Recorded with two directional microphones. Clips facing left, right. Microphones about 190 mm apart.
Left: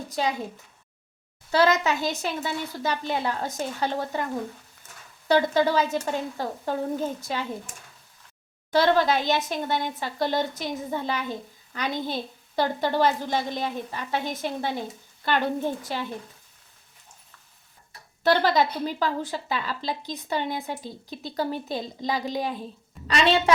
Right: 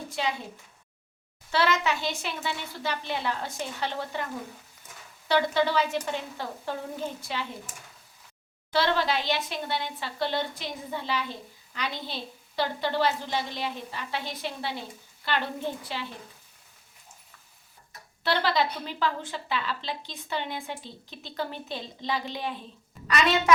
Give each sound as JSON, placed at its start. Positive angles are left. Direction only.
{"t": 0.1, "sound": "a woman's voice", "side_deg": 40}
{"t": 1.5, "sound": "speech", "side_deg": 40}
{"t": 5.3, "sound": "speech", "side_deg": 45}
{"t": 8.7, "sound": "speech", "side_deg": 45}
{"t": 18.2, "sound": "a woman's voice", "side_deg": 45}
{"t": 23.0, "sound": "a woman's voice", "side_deg": 30}